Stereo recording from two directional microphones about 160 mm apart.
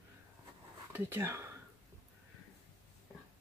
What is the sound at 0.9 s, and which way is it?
Speech, 15° right (ahead or behind).